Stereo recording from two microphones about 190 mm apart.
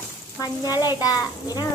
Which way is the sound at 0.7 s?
20° left (ahead or behind).